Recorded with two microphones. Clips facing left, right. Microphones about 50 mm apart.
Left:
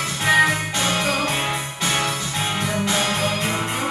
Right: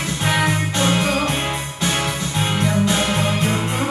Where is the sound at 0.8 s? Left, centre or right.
Right.